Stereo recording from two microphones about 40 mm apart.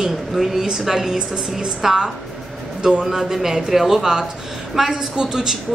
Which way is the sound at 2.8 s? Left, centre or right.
Right.